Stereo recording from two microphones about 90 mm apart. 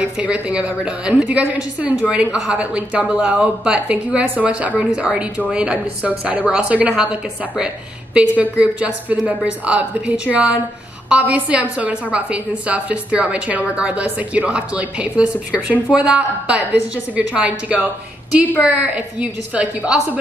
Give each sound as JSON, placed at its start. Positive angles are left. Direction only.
{"t": 0.2, "sound": "a woman's voice", "side_deg": -10}